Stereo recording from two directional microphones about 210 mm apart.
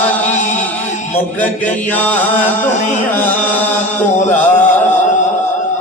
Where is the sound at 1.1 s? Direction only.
5° left (ahead or behind).